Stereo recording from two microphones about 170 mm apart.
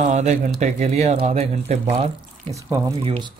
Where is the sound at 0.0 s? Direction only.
45° right (ahead or behind).